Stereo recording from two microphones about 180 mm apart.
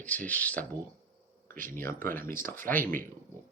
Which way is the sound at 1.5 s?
50° right (ahead or behind).